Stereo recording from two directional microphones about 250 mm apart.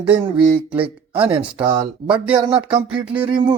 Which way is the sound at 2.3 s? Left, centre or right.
Centre.